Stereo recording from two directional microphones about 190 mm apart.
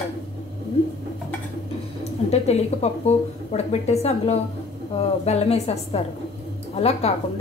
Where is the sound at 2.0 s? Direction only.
35° left (ahead or behind).